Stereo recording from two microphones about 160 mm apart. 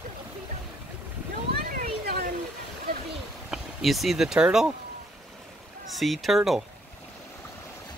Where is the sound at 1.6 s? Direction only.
65° right (ahead or behind).